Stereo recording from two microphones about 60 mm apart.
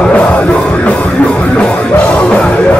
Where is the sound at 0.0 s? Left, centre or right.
Centre.